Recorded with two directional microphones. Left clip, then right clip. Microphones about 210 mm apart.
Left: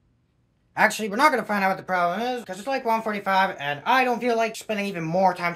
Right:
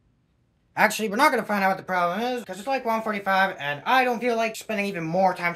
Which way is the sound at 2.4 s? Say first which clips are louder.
Even; 15° left (ahead or behind).